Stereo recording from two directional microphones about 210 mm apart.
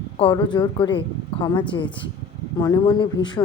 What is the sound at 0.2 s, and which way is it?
A woman's voice, 20° left (ahead or behind).